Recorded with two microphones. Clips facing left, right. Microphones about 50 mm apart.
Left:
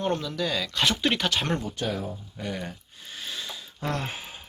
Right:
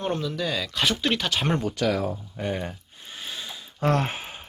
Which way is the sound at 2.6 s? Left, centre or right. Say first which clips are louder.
Right 2 dB; centre.